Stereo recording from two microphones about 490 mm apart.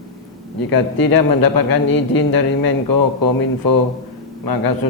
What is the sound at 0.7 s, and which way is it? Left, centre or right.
A man's voice, left.